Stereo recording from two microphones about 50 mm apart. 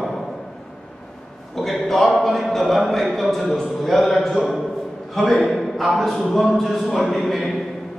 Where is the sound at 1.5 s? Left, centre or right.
Centre.